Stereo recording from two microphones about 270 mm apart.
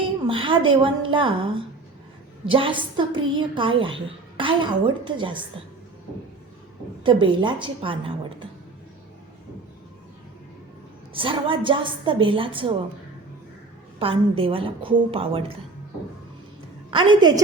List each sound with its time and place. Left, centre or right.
0.0 s a woman's voice: centre
7.0 s a woman's voice: centre
11.1 s a woman's voice: centre
14.0 s a woman's voice: centre
16.9 s a woman's voice: centre